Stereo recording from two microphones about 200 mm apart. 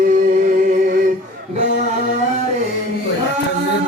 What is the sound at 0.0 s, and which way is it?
Music, 45° right (ahead or behind).